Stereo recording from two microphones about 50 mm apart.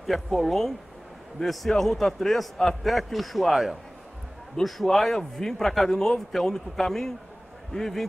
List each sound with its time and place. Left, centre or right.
0.0 s a man's voice: centre